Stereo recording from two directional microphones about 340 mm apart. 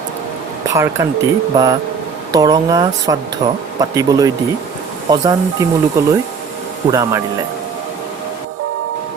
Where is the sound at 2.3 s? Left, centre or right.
Centre.